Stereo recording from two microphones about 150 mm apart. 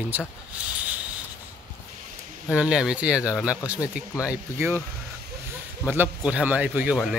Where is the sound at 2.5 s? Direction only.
5° right (ahead or behind).